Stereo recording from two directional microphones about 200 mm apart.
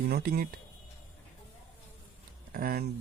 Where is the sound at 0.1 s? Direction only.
50° right (ahead or behind).